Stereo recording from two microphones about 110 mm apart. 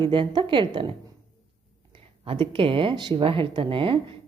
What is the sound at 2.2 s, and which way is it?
A woman's voice, 55° right (ahead or behind).